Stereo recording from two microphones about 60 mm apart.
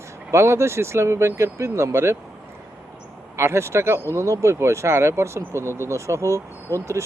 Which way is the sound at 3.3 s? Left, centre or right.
Right.